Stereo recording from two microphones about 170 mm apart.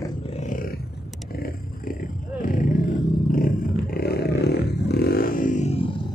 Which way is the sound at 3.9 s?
70° left (ahead or behind).